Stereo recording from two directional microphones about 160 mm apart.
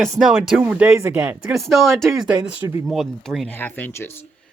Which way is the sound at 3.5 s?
15° left (ahead or behind).